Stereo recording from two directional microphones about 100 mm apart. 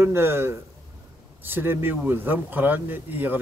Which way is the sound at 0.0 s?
25° right (ahead or behind).